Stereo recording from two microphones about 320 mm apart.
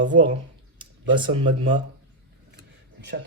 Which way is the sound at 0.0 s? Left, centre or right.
Right.